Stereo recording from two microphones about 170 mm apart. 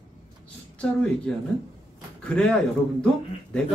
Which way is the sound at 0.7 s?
5° left (ahead or behind).